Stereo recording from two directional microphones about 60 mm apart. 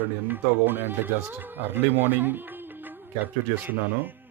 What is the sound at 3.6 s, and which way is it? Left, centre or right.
Speech, right.